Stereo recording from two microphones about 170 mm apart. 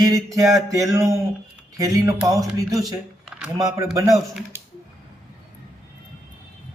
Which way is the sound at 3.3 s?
5° right (ahead or behind).